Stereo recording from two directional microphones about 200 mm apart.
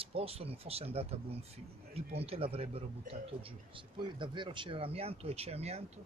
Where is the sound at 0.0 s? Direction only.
30° right (ahead or behind).